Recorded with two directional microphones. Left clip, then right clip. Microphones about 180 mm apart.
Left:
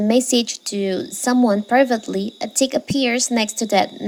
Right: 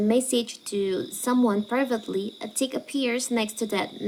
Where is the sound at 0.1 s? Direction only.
35° left (ahead or behind).